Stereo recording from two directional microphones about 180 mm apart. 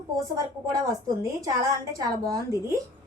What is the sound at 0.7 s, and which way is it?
A woman's voice, 15° right (ahead or behind).